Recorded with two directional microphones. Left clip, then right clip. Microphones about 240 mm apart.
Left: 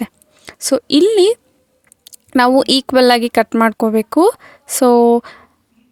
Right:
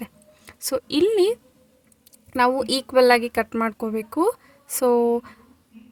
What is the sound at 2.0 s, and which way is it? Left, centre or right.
A woman's voice, left.